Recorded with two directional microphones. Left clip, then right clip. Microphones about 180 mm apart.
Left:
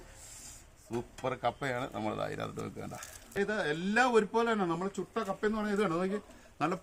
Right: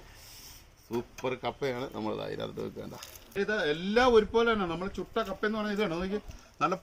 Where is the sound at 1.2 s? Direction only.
25° left (ahead or behind).